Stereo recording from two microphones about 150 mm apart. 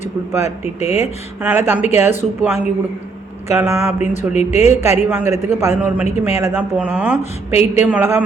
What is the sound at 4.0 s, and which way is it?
Speech, 50° left (ahead or behind).